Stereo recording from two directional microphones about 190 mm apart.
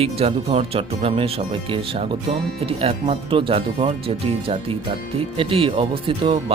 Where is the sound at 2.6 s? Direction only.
30° right (ahead or behind).